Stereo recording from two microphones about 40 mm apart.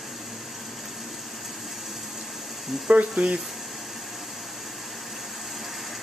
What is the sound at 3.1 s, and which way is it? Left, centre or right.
Speech, right.